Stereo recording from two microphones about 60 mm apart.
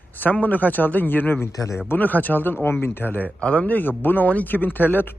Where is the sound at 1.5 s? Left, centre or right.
Left.